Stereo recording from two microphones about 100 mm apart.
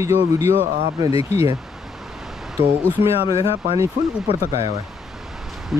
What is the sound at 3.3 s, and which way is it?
Speech, 70° left (ahead or behind).